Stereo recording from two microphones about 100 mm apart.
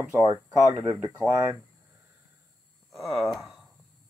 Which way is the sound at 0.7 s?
25° right (ahead or behind).